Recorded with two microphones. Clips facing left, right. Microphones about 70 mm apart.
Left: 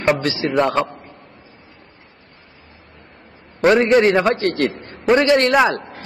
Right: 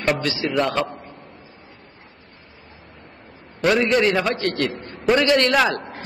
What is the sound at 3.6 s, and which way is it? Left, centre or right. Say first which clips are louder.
A man's voice: left 5 dB; left.